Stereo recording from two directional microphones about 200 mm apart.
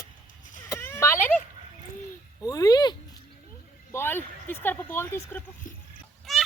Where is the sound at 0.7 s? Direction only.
15° left (ahead or behind).